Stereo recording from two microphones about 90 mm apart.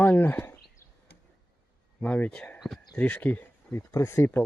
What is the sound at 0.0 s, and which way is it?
Speech, 20° left (ahead or behind).